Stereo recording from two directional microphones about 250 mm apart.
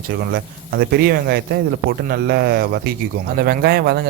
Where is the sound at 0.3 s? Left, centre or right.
Right.